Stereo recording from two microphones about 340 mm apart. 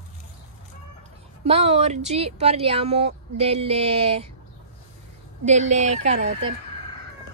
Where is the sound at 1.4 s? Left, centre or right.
Centre.